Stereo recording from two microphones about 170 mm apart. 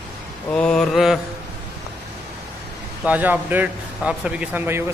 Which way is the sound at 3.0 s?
10° right (ahead or behind).